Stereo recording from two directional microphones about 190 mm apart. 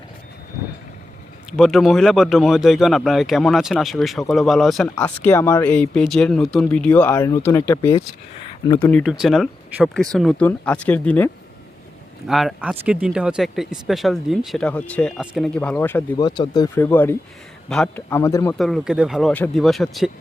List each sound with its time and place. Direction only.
1.5 s speech: centre (ahead or behind)
4.9 s speech: 10° left (ahead or behind)
8.9 s speech: centre (ahead or behind)
12.3 s speech: centre (ahead or behind)
16.1 s speech: 20° left (ahead or behind)
16.8 s speech: 10° left (ahead or behind)
18.5 s speech: centre (ahead or behind)